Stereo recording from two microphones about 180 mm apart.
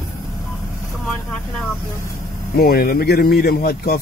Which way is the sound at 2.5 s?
55° left (ahead or behind).